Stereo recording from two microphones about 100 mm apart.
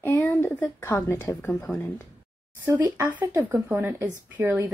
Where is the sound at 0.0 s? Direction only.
15° left (ahead or behind).